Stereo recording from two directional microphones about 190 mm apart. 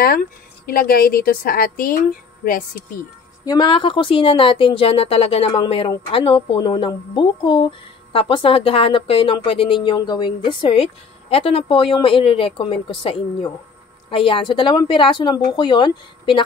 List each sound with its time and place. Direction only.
0.0 s a woman's voice: 50° left (ahead or behind)
3.4 s a woman's voice: 25° left (ahead or behind)